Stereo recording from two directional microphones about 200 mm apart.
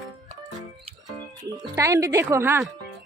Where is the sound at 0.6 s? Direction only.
20° right (ahead or behind).